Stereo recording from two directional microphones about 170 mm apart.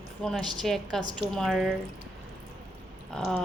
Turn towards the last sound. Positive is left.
turn(degrees=5)  # may be behind; listen again after turning